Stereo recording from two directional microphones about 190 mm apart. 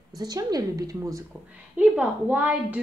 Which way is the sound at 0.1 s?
20° right (ahead or behind).